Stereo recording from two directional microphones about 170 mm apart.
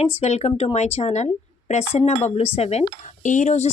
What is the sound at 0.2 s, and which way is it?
Speech, 40° left (ahead or behind).